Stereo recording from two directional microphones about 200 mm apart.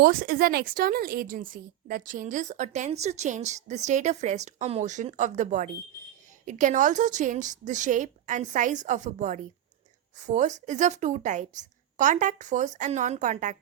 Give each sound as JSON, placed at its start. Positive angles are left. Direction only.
{"t": 0.0, "sound": "a woman's voice", "side_deg": -45}